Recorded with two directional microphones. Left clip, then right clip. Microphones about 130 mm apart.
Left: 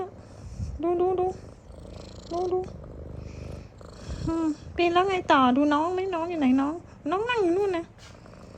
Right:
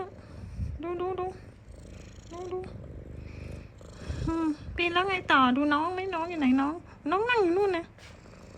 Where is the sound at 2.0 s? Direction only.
20° left (ahead or behind).